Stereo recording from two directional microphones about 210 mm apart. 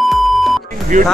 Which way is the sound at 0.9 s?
40° right (ahead or behind).